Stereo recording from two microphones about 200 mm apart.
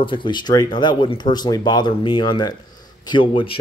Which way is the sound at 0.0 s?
25° left (ahead or behind).